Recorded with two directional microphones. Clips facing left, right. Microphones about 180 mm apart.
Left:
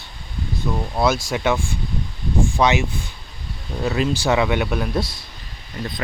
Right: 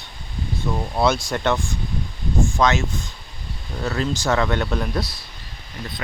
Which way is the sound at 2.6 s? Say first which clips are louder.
Left 2 dB; 15° left (ahead or behind).